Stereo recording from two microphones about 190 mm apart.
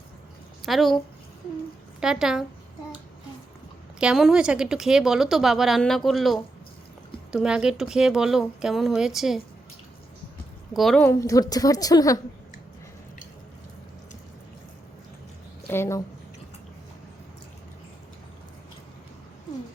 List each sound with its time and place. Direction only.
0.6 s speech: centre (ahead or behind)
2.0 s speech: 5° right (ahead or behind)
4.0 s speech: 5° right (ahead or behind)
10.8 s speech: centre (ahead or behind)
11.1 s a woman's voice: 15° left (ahead or behind)
15.7 s a woman's voice: 15° left (ahead or behind)